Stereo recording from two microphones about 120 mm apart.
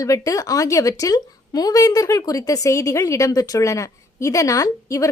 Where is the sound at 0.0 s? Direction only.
30° left (ahead or behind).